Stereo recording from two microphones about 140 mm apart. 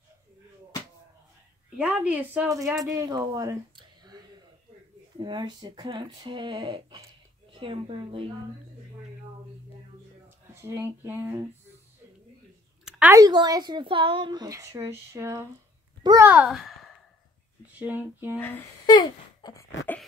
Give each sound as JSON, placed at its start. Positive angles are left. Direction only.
{"t": 1.8, "sound": "speech", "side_deg": -10}
{"t": 10.5, "sound": "speech", "side_deg": -20}
{"t": 13.1, "sound": "a child's voice", "side_deg": -30}
{"t": 16.2, "sound": "speech", "side_deg": -10}
{"t": 17.7, "sound": "speech", "side_deg": -15}
{"t": 18.9, "sound": "a sound", "side_deg": 30}